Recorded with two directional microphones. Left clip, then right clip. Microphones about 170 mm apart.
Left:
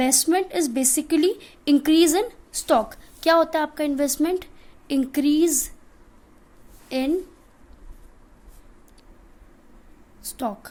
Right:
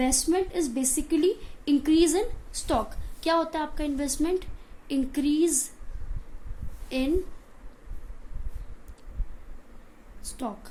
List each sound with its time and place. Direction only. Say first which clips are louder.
0.0 s a woman's voice: left 5 dB; 60° left (ahead or behind)
6.8 s a woman's voice: left 4 dB; 50° left (ahead or behind)
10.3 s a woman's voice: left 7 dB; 55° left (ahead or behind)